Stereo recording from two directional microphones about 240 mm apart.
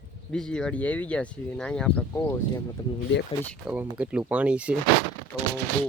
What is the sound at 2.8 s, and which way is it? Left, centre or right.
Speech, centre.